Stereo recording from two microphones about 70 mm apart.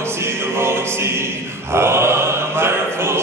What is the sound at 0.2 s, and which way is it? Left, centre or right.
Music, right.